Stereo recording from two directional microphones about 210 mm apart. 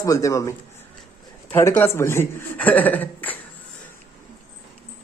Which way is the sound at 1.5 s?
10° left (ahead or behind).